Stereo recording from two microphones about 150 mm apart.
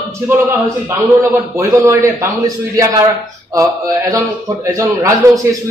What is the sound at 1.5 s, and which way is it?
A man's voice, 20° right (ahead or behind).